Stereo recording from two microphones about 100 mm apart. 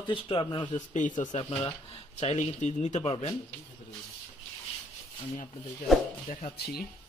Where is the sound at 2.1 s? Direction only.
90° left.